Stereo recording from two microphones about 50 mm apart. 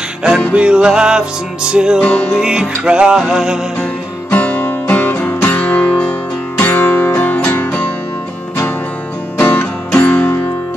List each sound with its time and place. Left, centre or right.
0.5 s music: right
2.0 s music: left
2.3 s music: centre
4.3 s music: left
6.6 s music: left
9.4 s music: left